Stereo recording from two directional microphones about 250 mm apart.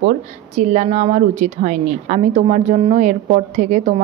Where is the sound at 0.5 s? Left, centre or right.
Right.